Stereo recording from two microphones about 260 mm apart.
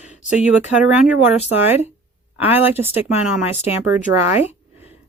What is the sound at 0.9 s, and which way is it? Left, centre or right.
Speech, centre.